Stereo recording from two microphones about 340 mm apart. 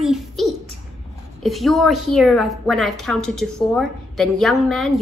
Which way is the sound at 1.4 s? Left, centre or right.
Centre.